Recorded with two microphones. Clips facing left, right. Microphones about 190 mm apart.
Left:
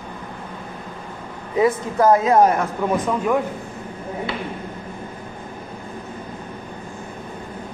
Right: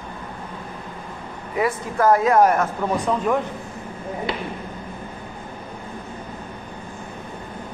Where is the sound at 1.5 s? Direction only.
20° left (ahead or behind).